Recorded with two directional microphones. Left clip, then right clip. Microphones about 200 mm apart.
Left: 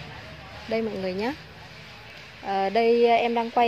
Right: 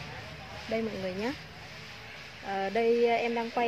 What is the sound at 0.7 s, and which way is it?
Speech, 40° left (ahead or behind).